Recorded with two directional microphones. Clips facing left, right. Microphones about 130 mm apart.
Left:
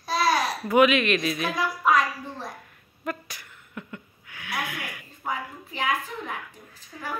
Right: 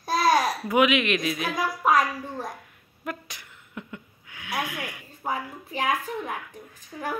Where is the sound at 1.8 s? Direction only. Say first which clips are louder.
Right 1 dB; 45° right (ahead or behind).